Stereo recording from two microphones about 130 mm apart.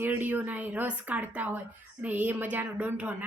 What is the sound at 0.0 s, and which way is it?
Speech, 15° right (ahead or behind).